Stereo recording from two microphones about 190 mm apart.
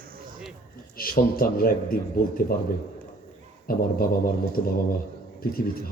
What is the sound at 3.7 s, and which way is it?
Speech, 50° left (ahead or behind).